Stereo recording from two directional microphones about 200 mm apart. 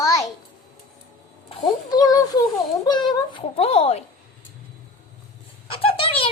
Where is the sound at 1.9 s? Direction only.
20° left (ahead or behind).